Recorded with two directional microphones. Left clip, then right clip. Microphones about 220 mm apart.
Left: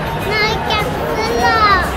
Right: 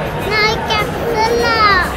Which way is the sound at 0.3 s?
35° right (ahead or behind).